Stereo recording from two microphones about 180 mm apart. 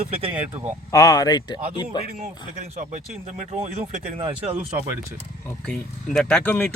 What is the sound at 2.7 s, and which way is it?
Speech, 40° right (ahead or behind).